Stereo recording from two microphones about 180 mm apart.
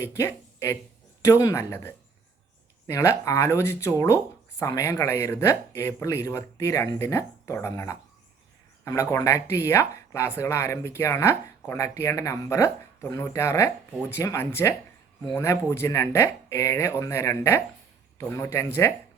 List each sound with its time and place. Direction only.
0.0 s speech: 15° left (ahead or behind)